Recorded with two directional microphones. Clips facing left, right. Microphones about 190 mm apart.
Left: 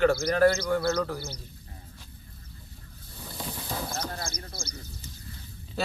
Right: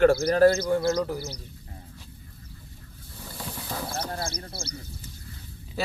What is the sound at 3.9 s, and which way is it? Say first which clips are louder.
Sheep: right 3 dB; 30° right (ahead or behind).